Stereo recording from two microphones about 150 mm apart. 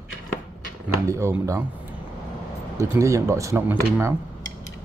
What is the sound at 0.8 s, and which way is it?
Speech, 20° right (ahead or behind).